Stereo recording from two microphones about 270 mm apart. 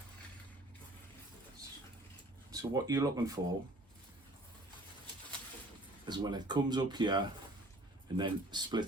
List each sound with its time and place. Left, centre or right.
2.5 s speech: centre
6.1 s speech: centre